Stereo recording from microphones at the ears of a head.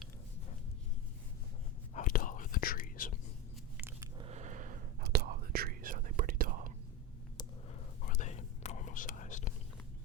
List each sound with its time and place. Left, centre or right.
2.0 s whispering: left
4.3 s whispering: right
8.0 s whispering: left